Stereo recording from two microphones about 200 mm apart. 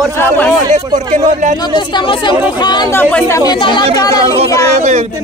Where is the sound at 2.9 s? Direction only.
10° left (ahead or behind).